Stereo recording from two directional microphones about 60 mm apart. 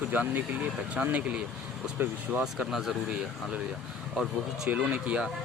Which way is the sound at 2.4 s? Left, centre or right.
Centre.